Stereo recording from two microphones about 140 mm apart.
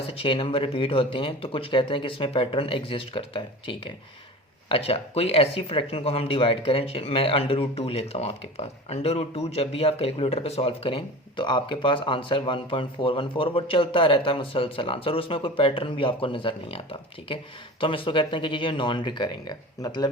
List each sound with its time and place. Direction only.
0.1 s speech: 40° left (ahead or behind)